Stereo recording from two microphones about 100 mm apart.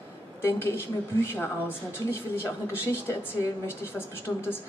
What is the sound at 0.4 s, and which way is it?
A woman's voice, 25° left (ahead or behind).